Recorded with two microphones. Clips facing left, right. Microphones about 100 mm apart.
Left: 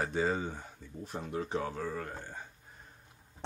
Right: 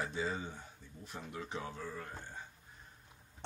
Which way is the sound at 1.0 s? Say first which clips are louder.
Left 8 dB; 40° left (ahead or behind).